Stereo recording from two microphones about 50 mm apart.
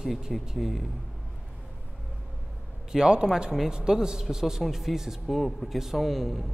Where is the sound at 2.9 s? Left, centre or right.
Centre.